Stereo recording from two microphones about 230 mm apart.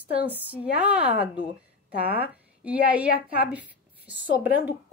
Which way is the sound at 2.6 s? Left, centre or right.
Centre.